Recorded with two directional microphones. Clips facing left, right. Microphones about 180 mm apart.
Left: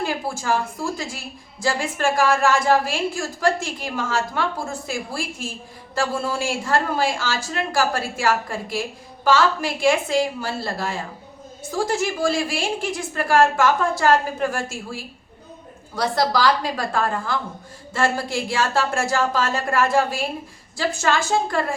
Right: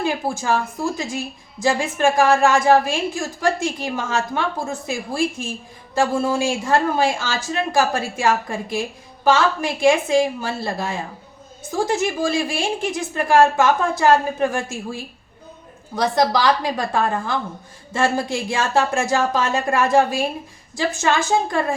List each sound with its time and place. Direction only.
0.0 s speech: 20° right (ahead or behind)